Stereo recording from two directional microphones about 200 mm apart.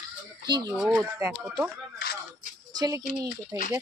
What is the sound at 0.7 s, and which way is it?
Speech, 5° right (ahead or behind).